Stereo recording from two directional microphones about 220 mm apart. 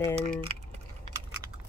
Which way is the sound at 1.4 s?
15° right (ahead or behind).